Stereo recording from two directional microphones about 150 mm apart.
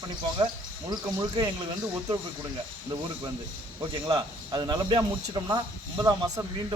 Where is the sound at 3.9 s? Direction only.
30° right (ahead or behind).